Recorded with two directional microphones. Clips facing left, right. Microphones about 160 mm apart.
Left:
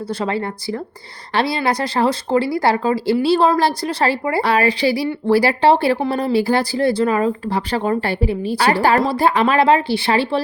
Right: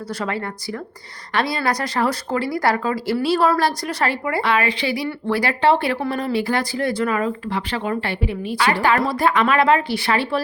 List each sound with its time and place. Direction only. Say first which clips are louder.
0.1 s speech: left 4 dB; 30° left (ahead or behind)